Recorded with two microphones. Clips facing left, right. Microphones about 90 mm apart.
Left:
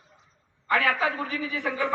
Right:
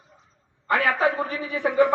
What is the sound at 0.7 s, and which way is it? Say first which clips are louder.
Speech: right 3 dB; 45° right (ahead or behind).